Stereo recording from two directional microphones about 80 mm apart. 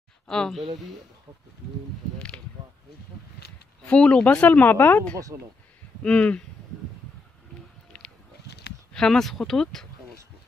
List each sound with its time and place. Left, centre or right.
0.3 s speech: centre
2.1 s speech: centre
3.8 s speech: centre
5.3 s speech: right
6.0 s speech: centre
7.9 s a sound: centre
8.9 s speech: centre